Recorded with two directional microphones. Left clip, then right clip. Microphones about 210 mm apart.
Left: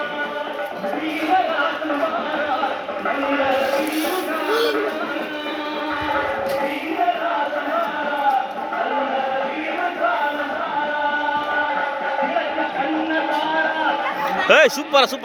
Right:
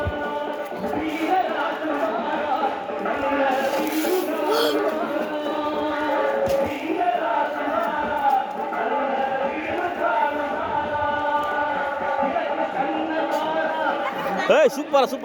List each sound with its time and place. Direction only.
14.4 s speech: centre (ahead or behind)